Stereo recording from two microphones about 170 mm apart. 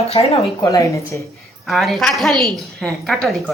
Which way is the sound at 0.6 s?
20° left (ahead or behind).